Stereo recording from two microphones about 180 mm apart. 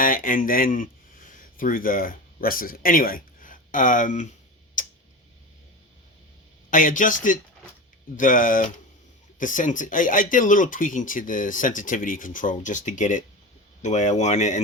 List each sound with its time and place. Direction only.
0.0 s speech: 50° left (ahead or behind)
4.8 s tick: 45° left (ahead or behind)
6.7 s speech: 45° left (ahead or behind)